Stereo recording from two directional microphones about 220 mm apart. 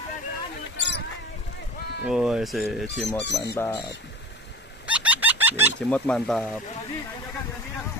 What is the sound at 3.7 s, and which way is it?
Speech, 20° left (ahead or behind).